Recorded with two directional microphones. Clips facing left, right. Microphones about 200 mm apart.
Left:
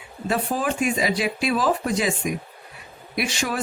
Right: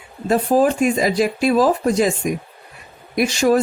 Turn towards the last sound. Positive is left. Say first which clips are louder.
# right 10 dB
turn(degrees=-40)  # may be behind; listen again after turning